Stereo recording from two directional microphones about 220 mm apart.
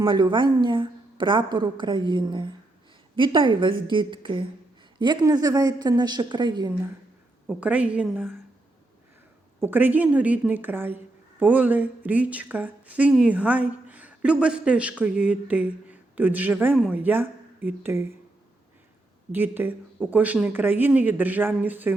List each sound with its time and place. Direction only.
0.0 s a woman's voice: 20° right (ahead or behind)
7.4 s a woman's voice: 5° right (ahead or behind)
9.6 s a woman's voice: 10° right (ahead or behind)
19.3 s a woman's voice: 10° right (ahead or behind)